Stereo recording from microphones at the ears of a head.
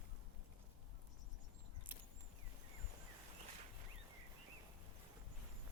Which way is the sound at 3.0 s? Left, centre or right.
Right.